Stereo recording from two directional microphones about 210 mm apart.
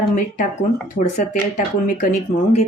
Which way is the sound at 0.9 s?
35° left (ahead or behind).